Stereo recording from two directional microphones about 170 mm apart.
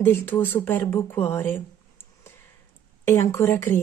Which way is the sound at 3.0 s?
15° left (ahead or behind).